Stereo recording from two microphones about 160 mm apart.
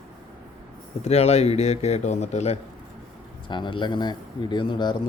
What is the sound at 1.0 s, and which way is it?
Speech, 40° left (ahead or behind).